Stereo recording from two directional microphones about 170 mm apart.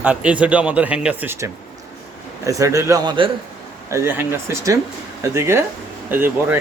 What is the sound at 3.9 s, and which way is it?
A man's voice, 15° right (ahead or behind).